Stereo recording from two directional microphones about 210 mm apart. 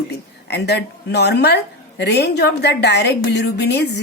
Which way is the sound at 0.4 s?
50° left (ahead or behind).